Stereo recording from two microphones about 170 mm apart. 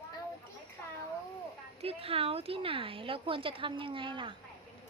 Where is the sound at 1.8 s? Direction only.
35° right (ahead or behind).